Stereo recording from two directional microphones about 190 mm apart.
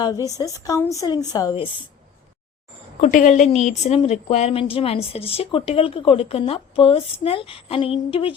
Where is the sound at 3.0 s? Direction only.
40° left (ahead or behind).